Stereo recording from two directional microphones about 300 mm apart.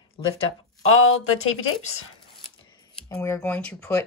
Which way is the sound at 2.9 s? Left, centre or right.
Centre.